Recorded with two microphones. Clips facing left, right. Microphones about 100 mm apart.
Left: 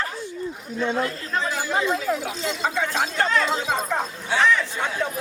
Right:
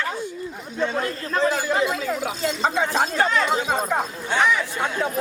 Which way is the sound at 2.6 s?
20° right (ahead or behind).